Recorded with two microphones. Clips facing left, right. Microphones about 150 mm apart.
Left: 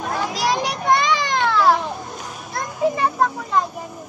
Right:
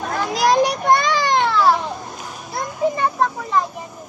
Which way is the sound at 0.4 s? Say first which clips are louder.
Right 9 dB; 45° right (ahead or behind).